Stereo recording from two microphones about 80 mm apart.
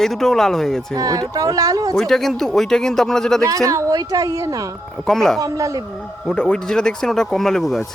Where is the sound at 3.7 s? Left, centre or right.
Right.